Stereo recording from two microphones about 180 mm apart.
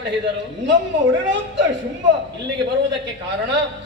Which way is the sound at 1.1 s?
90° right.